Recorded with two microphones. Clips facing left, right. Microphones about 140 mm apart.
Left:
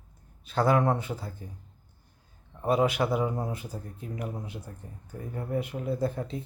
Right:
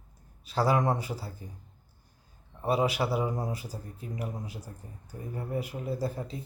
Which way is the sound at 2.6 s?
5° right (ahead or behind).